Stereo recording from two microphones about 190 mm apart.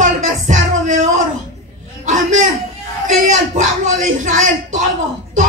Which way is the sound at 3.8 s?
40° right (ahead or behind).